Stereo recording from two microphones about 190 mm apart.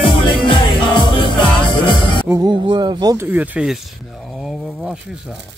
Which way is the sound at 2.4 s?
25° right (ahead or behind).